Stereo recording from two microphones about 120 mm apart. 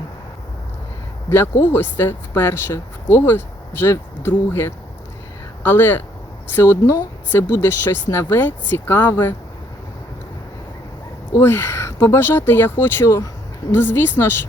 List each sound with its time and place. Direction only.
1.3 s speech: 20° left (ahead or behind)
11.3 s speech: 20° left (ahead or behind)